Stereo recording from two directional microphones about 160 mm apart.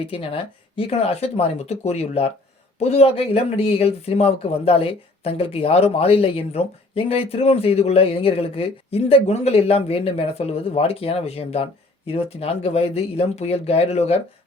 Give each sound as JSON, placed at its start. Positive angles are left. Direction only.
{"t": 0.0, "sound": "speech", "side_deg": 35}